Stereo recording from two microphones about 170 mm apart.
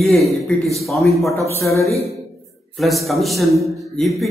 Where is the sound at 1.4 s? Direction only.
15° left (ahead or behind).